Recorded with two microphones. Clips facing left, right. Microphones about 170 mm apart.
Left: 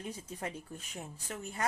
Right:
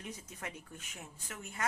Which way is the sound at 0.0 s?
30° left (ahead or behind).